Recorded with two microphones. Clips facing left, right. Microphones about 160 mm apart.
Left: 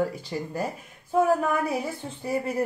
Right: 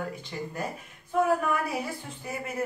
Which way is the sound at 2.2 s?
35° left (ahead or behind).